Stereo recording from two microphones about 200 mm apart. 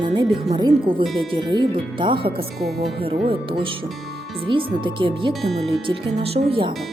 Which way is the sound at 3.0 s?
25° right (ahead or behind).